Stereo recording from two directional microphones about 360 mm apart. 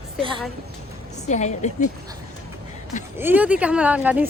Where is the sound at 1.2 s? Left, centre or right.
Centre.